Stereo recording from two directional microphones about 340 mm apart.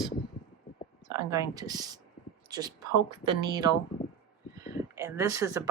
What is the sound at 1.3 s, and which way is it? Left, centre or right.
Speech, centre.